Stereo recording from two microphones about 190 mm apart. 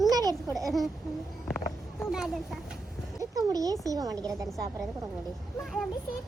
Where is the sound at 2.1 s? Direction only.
Centre (ahead or behind).